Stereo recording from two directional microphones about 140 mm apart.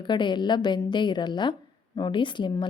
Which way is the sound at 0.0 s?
35° left (ahead or behind).